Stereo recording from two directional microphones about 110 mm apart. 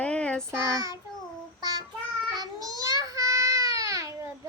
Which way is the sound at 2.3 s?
35° right (ahead or behind).